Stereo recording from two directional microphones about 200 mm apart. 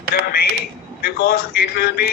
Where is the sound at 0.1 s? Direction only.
50° left (ahead or behind).